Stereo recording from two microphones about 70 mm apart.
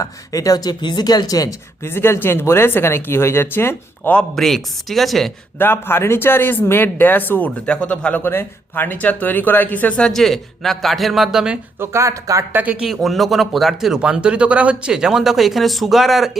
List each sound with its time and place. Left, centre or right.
0.0 s speech: left
1.8 s speech: left
4.4 s speech: centre
5.5 s speech: left
7.7 s speech: centre
8.2 s speech: left
10.0 s speech: centre
11.8 s speech: right
12.5 s speech: right
12.8 s speech: centre
14.0 s speech: centre